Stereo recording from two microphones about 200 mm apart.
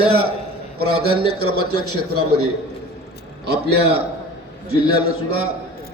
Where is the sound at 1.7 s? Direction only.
90° right.